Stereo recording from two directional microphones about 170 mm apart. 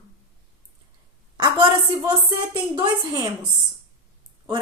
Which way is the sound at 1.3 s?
25° right (ahead or behind).